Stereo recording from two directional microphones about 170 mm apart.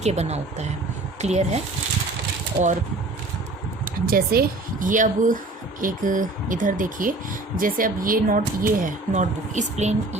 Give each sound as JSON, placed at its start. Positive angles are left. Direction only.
{"t": 0.0, "sound": "speech", "side_deg": -40}
{"t": 2.5, "sound": "speech", "side_deg": -20}
{"t": 4.0, "sound": "speech", "side_deg": -60}